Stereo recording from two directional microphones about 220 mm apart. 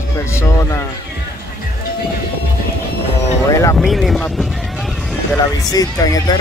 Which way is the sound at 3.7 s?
Centre (ahead or behind).